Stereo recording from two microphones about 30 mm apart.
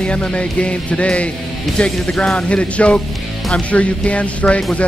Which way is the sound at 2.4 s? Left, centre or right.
Left.